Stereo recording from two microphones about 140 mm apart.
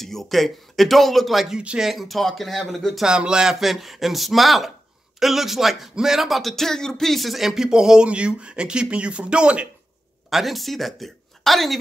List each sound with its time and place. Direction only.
0.0 s speech: centre (ahead or behind)